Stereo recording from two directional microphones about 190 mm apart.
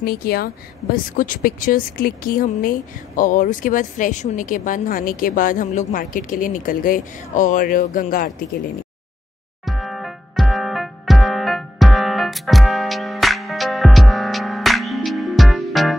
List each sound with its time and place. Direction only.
0.0 s speech: 55° left (ahead or behind)
9.7 s music: centre (ahead or behind)